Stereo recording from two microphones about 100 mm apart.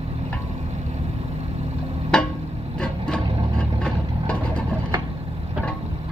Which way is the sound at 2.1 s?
10° left (ahead or behind).